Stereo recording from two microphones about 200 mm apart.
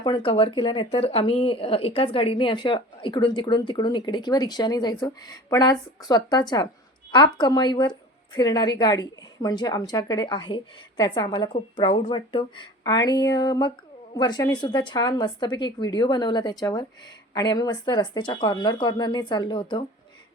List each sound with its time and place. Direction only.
0.0 s a woman's voice: 25° left (ahead or behind)